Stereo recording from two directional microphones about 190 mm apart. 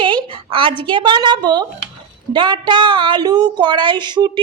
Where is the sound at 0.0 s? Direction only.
25° right (ahead or behind).